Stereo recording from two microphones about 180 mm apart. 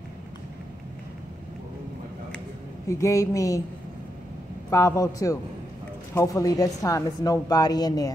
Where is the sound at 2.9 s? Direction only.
15° left (ahead or behind).